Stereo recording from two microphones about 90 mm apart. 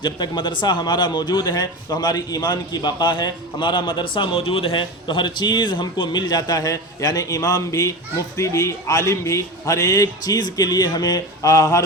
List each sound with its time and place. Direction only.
0.0 s a man's voice: 55° left (ahead or behind); by 11.8 s 40° left (ahead or behind)